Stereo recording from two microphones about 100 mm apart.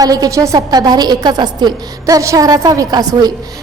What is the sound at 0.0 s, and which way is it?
A woman's voice, 40° right (ahead or behind).